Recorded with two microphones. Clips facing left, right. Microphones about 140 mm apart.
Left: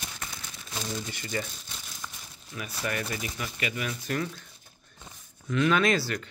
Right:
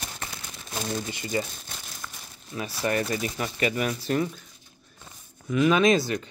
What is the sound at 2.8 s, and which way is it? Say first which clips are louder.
Speech: right 6 dB; 35° right (ahead or behind).